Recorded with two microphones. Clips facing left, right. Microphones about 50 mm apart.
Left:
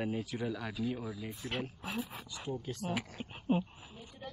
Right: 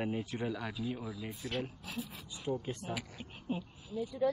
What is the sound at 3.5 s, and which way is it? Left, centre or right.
Speech, left.